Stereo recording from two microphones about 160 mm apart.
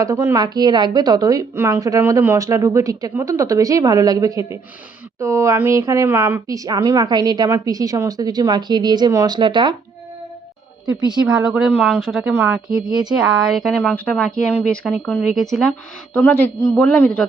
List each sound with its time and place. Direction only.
0.0 s a woman's voice: 20° right (ahead or behind)
11.3 s a woman's voice: 5° right (ahead or behind)
12.3 s a woman's voice: 10° right (ahead or behind)
16.1 s a man's voice: 10° left (ahead or behind)
16.6 s a woman's voice: centre (ahead or behind)
16.8 s a man's voice: 10° left (ahead or behind)